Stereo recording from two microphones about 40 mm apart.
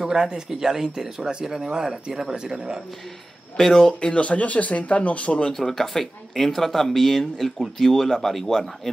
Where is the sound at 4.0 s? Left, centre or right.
Left.